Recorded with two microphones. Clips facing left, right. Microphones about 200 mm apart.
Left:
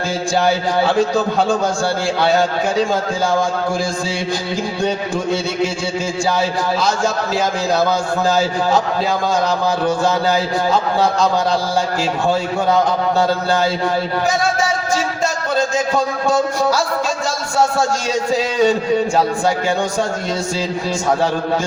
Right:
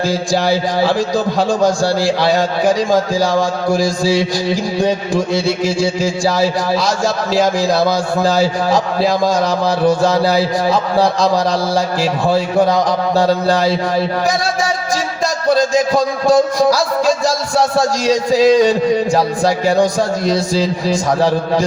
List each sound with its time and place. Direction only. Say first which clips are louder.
6.0 s speech: right 4 dB; 35° right (ahead or behind)
7.7 s speech: right 2 dB; 35° right (ahead or behind)
15.9 s speech: right 4 dB; 35° right (ahead or behind)